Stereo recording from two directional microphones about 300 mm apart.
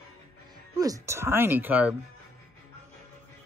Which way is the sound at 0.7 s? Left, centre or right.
Centre.